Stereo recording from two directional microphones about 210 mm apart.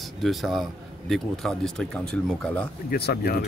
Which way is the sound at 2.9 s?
50° left (ahead or behind).